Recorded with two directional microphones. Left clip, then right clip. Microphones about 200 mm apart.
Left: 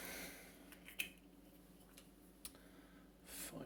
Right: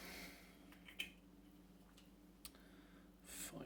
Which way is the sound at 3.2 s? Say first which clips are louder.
Left 1 dB; 10° left (ahead or behind).